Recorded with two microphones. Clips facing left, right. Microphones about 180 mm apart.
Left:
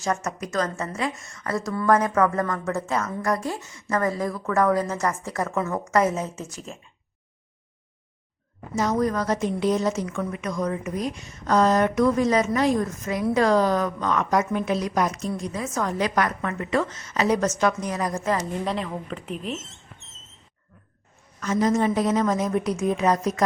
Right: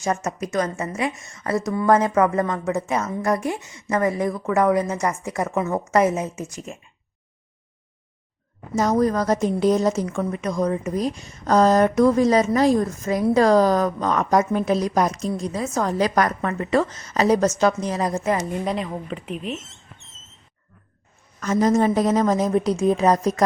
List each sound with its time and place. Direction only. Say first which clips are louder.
0.0 s a woman's voice: right 2 dB; 25° right (ahead or behind)
8.7 s a woman's voice: right 4 dB; 40° right (ahead or behind); by 18.4 s 25° right (ahead or behind)
18.6 s speech: right 2 dB; 15° right (ahead or behind)
21.4 s a woman's voice: right 3 dB; 40° right (ahead or behind)